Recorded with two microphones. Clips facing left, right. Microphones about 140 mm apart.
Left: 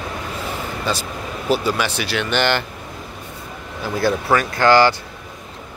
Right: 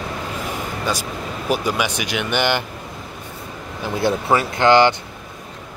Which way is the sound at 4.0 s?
20° right (ahead or behind).